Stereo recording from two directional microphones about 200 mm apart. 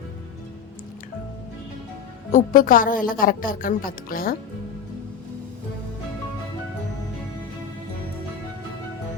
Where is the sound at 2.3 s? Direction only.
40° left (ahead or behind).